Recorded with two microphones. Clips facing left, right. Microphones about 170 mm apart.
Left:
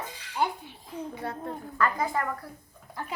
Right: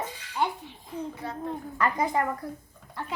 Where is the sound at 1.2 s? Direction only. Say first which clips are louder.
Left 1 dB; 60° left (ahead or behind).